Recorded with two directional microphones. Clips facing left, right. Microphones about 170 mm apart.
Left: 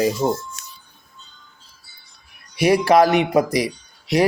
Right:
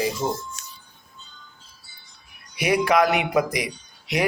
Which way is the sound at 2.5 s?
35° left (ahead or behind).